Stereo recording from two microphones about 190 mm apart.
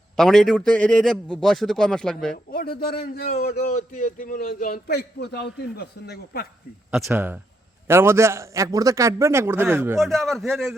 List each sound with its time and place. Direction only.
0.2 s a man's voice: centre (ahead or behind)
2.3 s a man's voice: 55° left (ahead or behind)
3.7 s a man's voice: 40° left (ahead or behind); by 6.5 s 55° left (ahead or behind)
7.1 s a man's voice: 10° right (ahead or behind)
10.0 s a man's voice: centre (ahead or behind)